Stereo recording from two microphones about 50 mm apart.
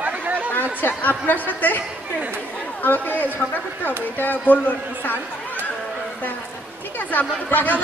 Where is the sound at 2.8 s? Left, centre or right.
Left.